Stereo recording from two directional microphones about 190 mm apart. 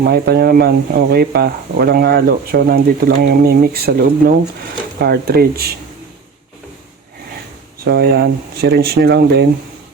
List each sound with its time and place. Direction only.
0.0 s speech: 55° right (ahead or behind)
7.9 s speech: 55° right (ahead or behind)